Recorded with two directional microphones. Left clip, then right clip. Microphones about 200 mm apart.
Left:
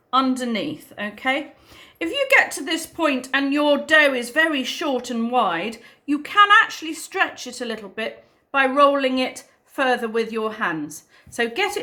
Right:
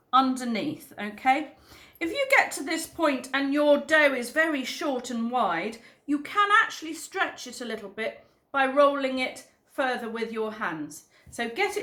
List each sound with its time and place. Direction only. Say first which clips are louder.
0.1 s a woman's voice: left 3 dB; 20° left (ahead or behind)